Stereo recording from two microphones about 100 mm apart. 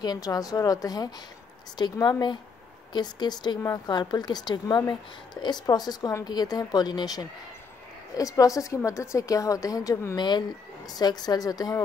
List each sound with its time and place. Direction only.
0.0 s a woman's voice: 40° left (ahead or behind)